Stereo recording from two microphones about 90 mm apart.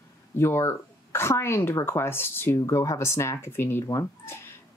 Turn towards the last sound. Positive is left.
turn(degrees=35)  # may be behind; listen again after turning